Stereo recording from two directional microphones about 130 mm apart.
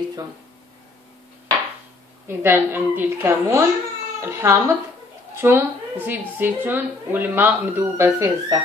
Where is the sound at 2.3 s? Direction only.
15° right (ahead or behind).